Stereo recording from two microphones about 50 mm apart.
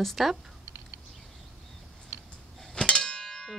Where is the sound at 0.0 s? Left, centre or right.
Centre.